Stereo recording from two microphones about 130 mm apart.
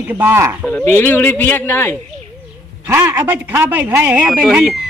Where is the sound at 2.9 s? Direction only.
20° right (ahead or behind).